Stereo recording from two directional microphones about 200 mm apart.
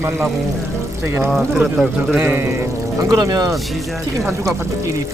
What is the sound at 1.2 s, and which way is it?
Speech, centre (ahead or behind).